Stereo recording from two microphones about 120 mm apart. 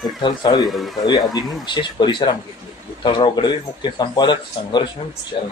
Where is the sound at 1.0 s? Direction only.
35° left (ahead or behind).